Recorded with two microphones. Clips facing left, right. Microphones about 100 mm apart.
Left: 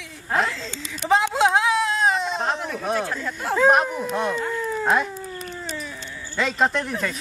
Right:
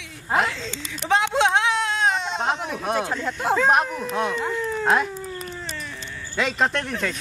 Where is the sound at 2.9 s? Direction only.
20° right (ahead or behind).